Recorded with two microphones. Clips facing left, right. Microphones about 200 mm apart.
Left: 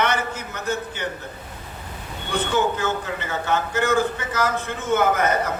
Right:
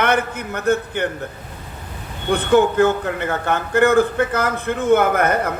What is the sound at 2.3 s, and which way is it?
A man's voice, 55° right (ahead or behind).